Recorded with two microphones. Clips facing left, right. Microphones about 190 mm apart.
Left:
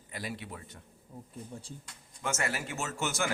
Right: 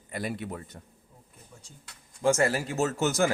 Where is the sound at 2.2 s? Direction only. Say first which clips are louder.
Right 10 dB; 35° right (ahead or behind).